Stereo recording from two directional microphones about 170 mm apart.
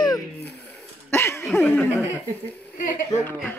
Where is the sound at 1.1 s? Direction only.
15° left (ahead or behind).